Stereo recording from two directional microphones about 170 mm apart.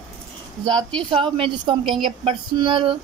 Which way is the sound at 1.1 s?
30° right (ahead or behind).